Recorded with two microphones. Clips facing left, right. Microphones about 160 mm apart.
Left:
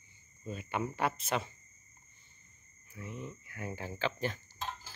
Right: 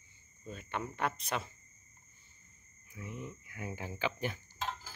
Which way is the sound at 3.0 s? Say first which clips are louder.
Left 1 dB; 25° left (ahead or behind).